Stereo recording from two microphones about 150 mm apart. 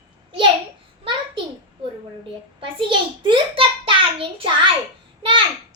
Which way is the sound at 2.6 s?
35° right (ahead or behind).